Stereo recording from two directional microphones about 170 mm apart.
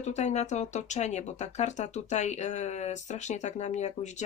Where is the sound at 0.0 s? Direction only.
40° left (ahead or behind).